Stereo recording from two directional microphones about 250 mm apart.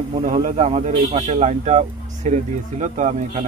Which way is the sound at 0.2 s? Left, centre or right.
Right.